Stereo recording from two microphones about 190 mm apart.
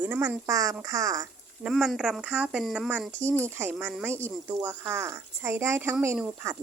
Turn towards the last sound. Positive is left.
turn(degrees=-10)  # may be behind; listen again after turning